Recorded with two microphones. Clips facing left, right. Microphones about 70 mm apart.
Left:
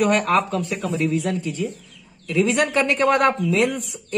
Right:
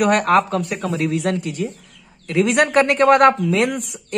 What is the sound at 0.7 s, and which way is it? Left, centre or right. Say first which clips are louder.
Speech: right 2 dB; right.